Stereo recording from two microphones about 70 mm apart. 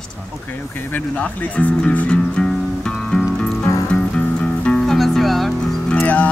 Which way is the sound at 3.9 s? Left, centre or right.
Centre.